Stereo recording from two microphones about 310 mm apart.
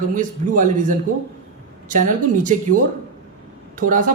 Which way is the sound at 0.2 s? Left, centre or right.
Right.